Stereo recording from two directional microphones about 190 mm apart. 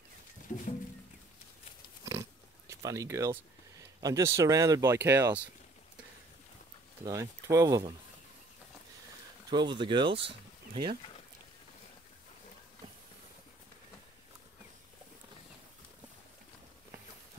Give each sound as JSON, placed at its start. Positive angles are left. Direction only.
{"t": 0.5, "sound": "music", "side_deg": 35}
{"t": 2.7, "sound": "speech", "side_deg": -15}
{"t": 7.1, "sound": "speech", "side_deg": -15}
{"t": 9.5, "sound": "speech", "side_deg": -25}